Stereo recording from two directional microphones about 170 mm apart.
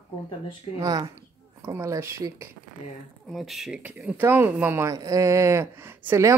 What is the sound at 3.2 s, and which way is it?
Speech, centre (ahead or behind).